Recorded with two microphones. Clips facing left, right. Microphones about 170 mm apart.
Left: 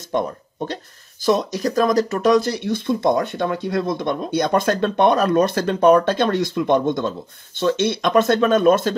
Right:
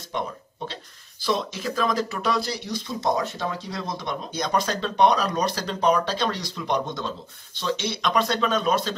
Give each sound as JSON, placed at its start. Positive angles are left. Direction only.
{"t": 1.2, "sound": "speech", "side_deg": 45}